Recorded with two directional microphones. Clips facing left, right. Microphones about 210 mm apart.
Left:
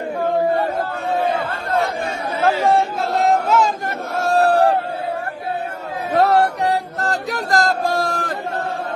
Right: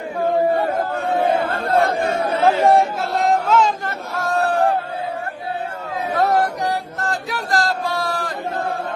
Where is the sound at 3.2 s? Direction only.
5° left (ahead or behind).